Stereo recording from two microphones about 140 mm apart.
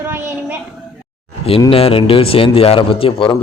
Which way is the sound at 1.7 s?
45° left (ahead or behind).